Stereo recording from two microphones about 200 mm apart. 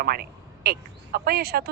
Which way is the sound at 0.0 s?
50° right (ahead or behind).